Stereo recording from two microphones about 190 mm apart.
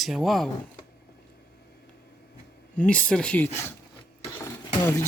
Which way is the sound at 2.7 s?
5° left (ahead or behind).